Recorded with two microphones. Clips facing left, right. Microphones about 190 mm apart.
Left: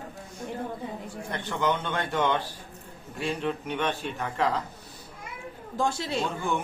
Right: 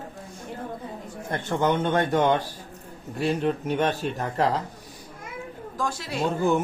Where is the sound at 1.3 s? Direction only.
50° right (ahead or behind).